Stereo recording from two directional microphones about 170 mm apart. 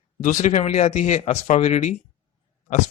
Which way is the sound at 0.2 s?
50° left (ahead or behind).